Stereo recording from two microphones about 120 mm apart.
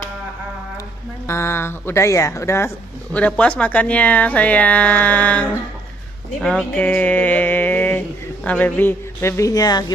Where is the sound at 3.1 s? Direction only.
10° left (ahead or behind).